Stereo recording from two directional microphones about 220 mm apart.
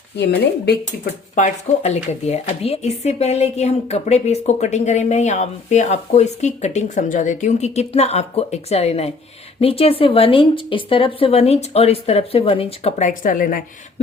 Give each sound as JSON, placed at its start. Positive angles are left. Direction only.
{"t": 0.2, "sound": "speech", "side_deg": 50}
{"t": 1.4, "sound": "a woman's voice", "side_deg": 30}